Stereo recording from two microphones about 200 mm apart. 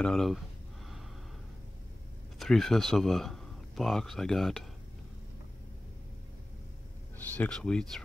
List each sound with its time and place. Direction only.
0.0 s speech: centre (ahead or behind)
2.3 s speech: centre (ahead or behind)
7.3 s speech: 5° left (ahead or behind)